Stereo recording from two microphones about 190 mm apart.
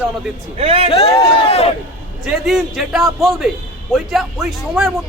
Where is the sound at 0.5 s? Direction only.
30° right (ahead or behind).